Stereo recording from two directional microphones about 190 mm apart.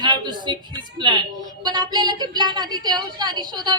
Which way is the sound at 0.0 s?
20° right (ahead or behind).